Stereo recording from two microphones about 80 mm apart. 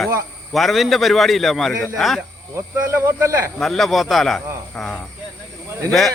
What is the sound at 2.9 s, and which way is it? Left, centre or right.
Speech, right.